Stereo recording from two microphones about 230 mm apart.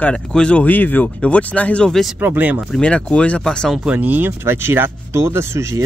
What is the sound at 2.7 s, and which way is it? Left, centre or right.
Speech, centre.